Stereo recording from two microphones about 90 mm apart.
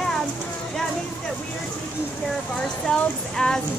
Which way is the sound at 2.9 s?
5° left (ahead or behind).